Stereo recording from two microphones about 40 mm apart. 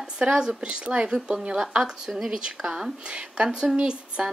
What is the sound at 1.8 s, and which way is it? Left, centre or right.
A woman's voice, centre.